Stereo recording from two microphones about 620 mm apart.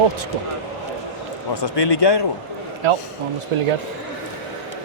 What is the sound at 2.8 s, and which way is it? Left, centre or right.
Speech, right.